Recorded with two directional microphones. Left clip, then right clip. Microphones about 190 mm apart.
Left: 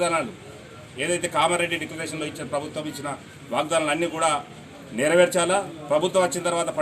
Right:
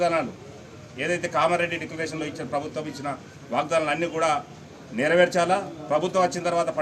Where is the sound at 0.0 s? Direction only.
5° right (ahead or behind).